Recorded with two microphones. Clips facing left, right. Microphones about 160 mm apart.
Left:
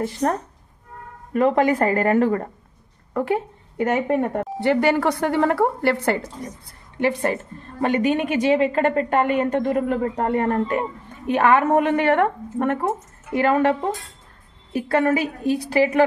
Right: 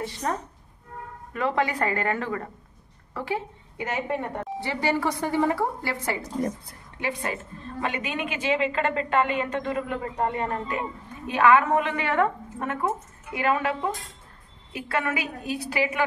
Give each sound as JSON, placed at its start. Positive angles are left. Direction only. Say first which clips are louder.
{"t": 0.0, "sound": "a woman's voice", "louder": "left 7 dB", "side_deg": 55}
{"t": 7.0, "sound": "a woman's voice", "louder": "left 9 dB", "side_deg": 50}
{"t": 12.8, "sound": "a woman's voice", "louder": "left 3 dB", "side_deg": 40}